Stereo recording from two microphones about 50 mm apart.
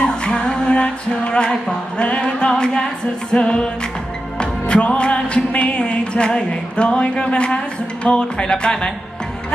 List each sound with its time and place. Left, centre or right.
0.3 s music: centre